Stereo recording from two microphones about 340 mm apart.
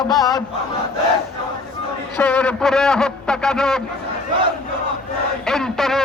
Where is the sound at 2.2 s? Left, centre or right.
Centre.